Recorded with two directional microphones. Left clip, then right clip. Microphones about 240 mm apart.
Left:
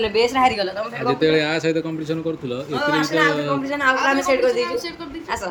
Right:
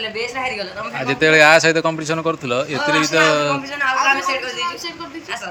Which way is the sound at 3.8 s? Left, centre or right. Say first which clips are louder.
Right 2 dB; left.